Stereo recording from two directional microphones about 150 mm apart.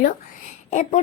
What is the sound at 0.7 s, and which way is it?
Speech, 55° left (ahead or behind).